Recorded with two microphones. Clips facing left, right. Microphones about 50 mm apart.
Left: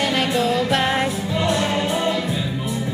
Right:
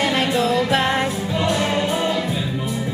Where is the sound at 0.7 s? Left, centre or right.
Centre.